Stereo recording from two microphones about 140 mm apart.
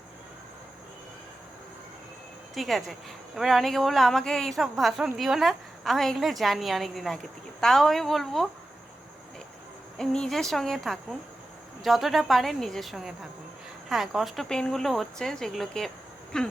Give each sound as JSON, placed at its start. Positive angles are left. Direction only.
{"t": 2.6, "sound": "a woman's voice", "side_deg": 0}
{"t": 10.0, "sound": "a woman's voice", "side_deg": 5}